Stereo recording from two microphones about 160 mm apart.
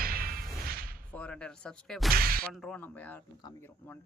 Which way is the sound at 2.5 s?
5° left (ahead or behind).